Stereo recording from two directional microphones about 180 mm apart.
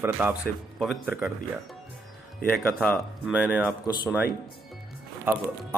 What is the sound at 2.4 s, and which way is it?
Speech, 5° left (ahead or behind).